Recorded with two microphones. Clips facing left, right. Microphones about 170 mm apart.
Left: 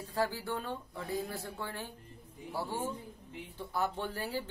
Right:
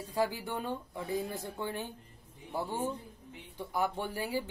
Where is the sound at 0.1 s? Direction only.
15° right (ahead or behind).